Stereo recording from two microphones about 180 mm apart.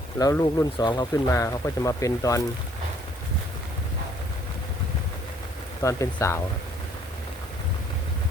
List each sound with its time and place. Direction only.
0.2 s speech: 20° left (ahead or behind)
5.8 s speech: 15° left (ahead or behind)